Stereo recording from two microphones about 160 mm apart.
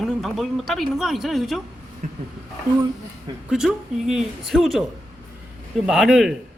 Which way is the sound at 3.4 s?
5° right (ahead or behind).